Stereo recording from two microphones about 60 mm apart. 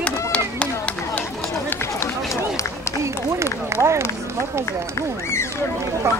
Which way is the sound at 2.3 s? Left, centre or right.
Left.